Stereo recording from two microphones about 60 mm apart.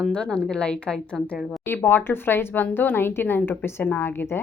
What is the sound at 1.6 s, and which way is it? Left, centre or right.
A woman's voice, left.